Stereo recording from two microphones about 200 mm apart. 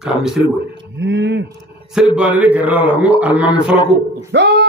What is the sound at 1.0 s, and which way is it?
Speech, 60° right (ahead or behind).